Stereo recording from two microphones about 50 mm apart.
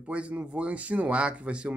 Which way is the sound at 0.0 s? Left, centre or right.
Right.